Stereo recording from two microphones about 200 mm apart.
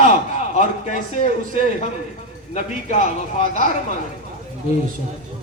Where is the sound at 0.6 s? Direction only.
35° left (ahead or behind).